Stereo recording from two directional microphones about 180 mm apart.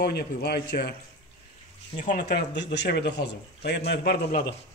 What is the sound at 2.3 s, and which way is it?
Speech, 75° left (ahead or behind).